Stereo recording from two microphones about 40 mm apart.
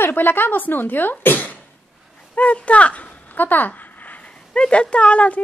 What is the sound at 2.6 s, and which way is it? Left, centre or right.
Speech, left.